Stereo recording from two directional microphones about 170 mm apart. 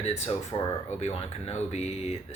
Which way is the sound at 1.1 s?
40° left (ahead or behind).